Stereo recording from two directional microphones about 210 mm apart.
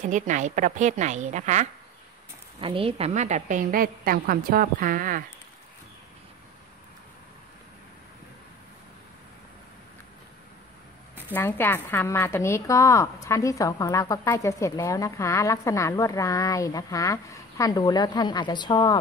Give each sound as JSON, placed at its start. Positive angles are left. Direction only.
{"t": 0.0, "sound": "a woman's voice", "side_deg": -35}
{"t": 11.2, "sound": "a woman's voice", "side_deg": 10}